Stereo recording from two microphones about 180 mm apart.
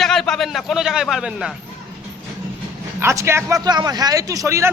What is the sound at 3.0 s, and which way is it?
Speech, 15° right (ahead or behind).